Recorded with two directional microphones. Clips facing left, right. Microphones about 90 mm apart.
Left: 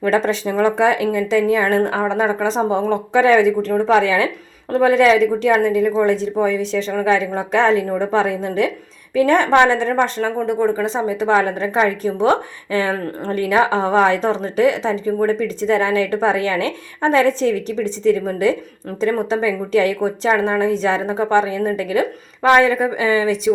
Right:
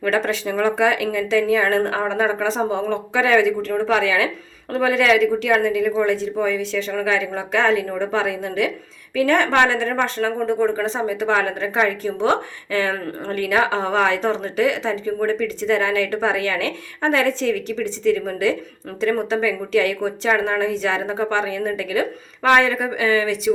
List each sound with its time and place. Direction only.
0.1 s a woman's voice: 20° left (ahead or behind)
9.9 s speech: 10° left (ahead or behind)
10.9 s a woman's voice: 25° left (ahead or behind)